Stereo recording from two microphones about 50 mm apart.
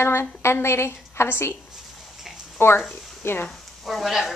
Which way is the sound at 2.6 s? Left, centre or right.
Left.